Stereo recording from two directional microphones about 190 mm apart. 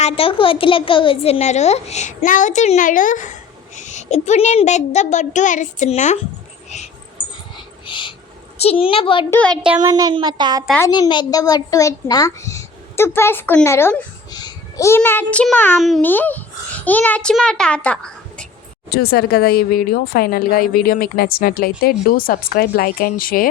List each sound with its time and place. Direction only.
0.0 s a woman's voice: 30° left (ahead or behind)
7.5 s dog: 25° left (ahead or behind)
8.5 s a woman's voice: 30° left (ahead or behind)
9.3 s speech: 5° left (ahead or behind)
9.8 s speech: 20° right (ahead or behind)
10.8 s a child's voice: 20° left (ahead or behind)
18.9 s speech: 55° left (ahead or behind)